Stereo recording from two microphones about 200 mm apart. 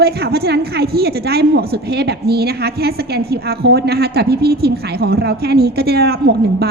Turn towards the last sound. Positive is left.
turn(degrees=-50)  # may be behind; listen again after turning